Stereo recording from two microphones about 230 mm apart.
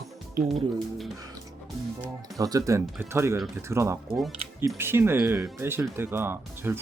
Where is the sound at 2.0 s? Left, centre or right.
Centre.